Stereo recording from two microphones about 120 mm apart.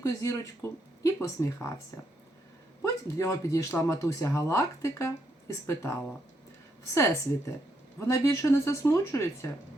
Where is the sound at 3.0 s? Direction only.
25° left (ahead or behind).